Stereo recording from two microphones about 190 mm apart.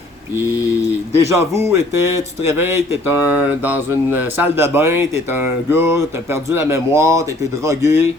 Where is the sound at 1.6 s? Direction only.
15° right (ahead or behind).